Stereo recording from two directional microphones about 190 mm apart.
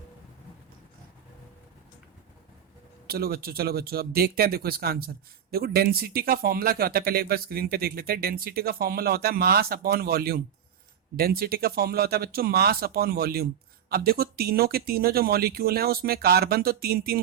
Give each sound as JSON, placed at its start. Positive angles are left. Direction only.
{"t": 3.1, "sound": "speech", "side_deg": -55}